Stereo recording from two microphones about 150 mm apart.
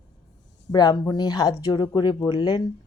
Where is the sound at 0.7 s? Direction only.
25° left (ahead or behind).